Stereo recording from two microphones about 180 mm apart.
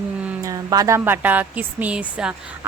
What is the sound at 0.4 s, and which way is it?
Speech, 20° right (ahead or behind).